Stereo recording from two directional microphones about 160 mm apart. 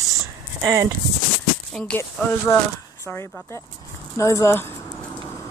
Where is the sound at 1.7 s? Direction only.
5° left (ahead or behind).